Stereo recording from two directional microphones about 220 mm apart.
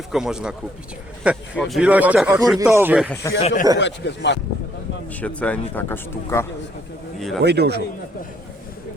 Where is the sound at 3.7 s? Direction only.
55° left (ahead or behind).